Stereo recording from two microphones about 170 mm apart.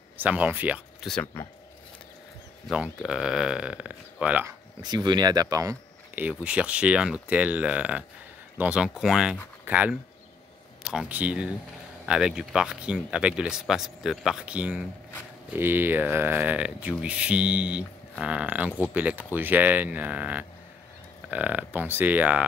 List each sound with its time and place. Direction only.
0.2 s speech: 10° right (ahead or behind)
1.0 s speech: 5° left (ahead or behind)
2.7 s speech: 5° right (ahead or behind)
4.8 s speech: 25° right (ahead or behind)
6.2 s speech: 5° right (ahead or behind)